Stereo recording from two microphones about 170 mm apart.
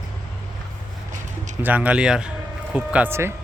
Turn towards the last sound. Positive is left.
turn(degrees=-15)  # may be behind; listen again after turning